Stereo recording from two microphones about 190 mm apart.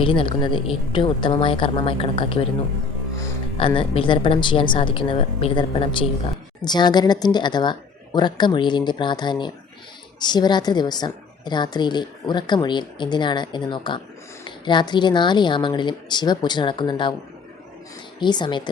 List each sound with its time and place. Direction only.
0.0 s a woman's voice: 25° left (ahead or behind)
3.8 s a woman's voice: 25° left (ahead or behind)
18.2 s a woman's voice: 25° left (ahead or behind)